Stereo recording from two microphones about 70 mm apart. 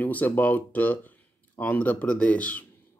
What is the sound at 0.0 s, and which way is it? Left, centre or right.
Speech, left.